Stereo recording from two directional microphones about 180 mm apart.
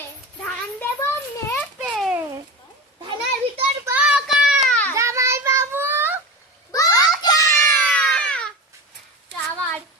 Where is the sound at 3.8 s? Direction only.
10° right (ahead or behind).